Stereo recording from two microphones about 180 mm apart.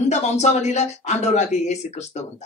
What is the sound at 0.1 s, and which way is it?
Speech, 40° left (ahead or behind).